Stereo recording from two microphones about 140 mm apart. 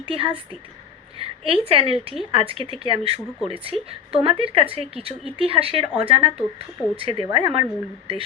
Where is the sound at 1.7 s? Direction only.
45° right (ahead or behind).